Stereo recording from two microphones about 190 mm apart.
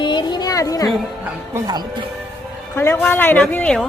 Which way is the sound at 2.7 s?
10° left (ahead or behind).